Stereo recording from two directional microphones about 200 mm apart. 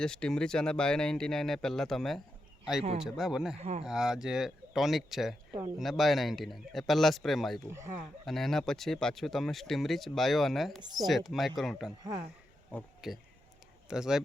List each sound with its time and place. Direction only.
0.0 s speech: 5° left (ahead or behind)
3.6 s speech: 30° right (ahead or behind)
3.8 s speech: 5° right (ahead or behind)
7.7 s speech: 10° right (ahead or behind)
8.2 s speech: centre (ahead or behind)